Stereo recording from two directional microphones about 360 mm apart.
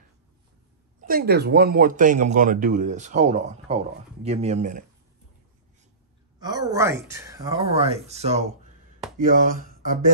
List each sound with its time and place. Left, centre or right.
1.0 s speech: right
6.4 s speech: centre